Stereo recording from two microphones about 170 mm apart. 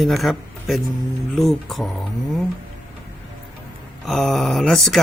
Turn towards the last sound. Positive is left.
turn(degrees=0)  # may be behind; listen again after turning